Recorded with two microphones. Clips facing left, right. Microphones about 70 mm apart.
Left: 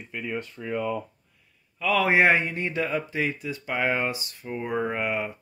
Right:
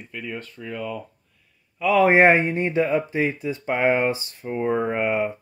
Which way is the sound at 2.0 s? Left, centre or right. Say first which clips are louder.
Right 5 dB; right.